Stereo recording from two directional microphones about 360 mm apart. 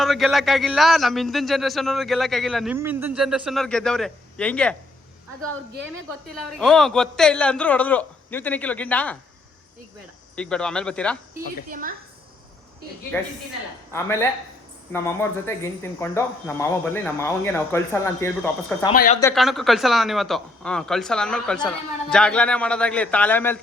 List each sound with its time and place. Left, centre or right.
0.0 s speech: centre
6.6 s speech: centre
10.3 s speech: centre
11.7 s a woman's voice: right
13.1 s speech: centre
18.9 s speech: left
19.2 s speech: centre